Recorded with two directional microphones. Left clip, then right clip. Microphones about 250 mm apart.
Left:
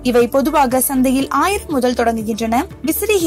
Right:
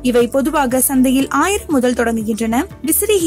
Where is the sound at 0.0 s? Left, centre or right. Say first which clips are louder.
Left 1 dB; centre.